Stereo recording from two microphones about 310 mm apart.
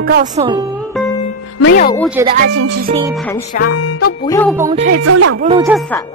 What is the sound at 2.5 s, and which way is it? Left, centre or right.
Speech, right.